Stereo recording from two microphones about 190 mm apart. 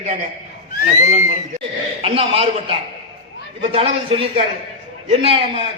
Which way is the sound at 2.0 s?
30° right (ahead or behind).